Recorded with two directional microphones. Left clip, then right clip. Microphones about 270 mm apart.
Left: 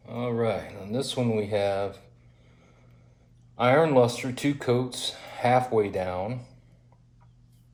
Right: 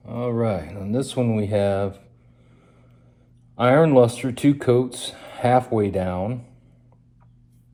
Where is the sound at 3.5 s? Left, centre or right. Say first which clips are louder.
Right 5 dB; right.